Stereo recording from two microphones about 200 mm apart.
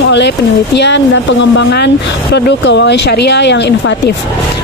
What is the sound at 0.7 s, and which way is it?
Speech, 60° left (ahead or behind).